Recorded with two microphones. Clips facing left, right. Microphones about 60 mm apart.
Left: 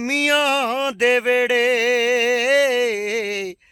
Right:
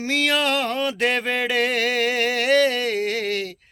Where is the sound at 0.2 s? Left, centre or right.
Centre.